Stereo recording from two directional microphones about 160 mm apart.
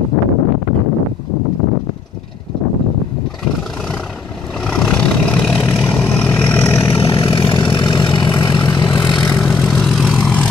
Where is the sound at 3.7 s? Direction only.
5° left (ahead or behind).